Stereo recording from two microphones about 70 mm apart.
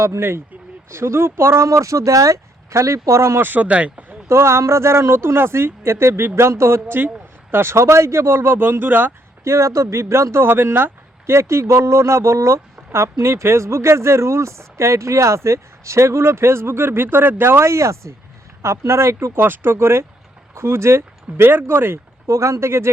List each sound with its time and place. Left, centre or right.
0.0 s speech: right
3.4 s speech: right
4.3 s speech: right
9.4 s speech: right
22.3 s speech: right